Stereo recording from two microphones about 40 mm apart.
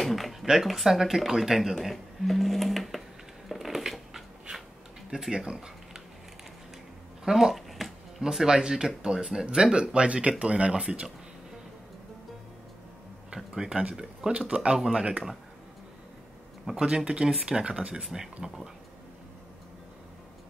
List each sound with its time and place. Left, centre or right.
0.0 s zipper: centre
0.5 s speech: centre
3.4 s a sound: centre
5.3 s speech: right
7.2 s a sound: centre
8.2 s speech: centre
13.6 s speech: right
16.6 s speech: centre
18.0 s speech: centre